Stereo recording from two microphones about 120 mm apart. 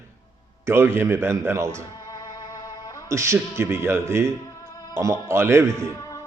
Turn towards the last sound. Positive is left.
turn(degrees=30)  # may be behind; listen again after turning